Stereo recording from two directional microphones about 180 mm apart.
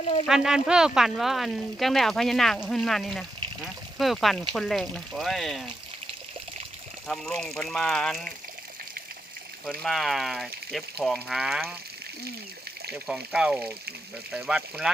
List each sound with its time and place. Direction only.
0.0 s speech: 30° left (ahead or behind)
0.3 s speech: centre (ahead or behind)
7.1 s speech: centre (ahead or behind)
9.8 s speech: centre (ahead or behind)
12.9 s speech: centre (ahead or behind)